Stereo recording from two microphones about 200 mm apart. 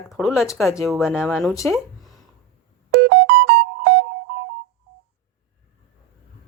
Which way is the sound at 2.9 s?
55° right (ahead or behind).